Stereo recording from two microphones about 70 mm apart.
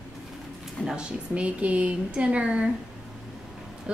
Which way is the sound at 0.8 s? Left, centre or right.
Centre.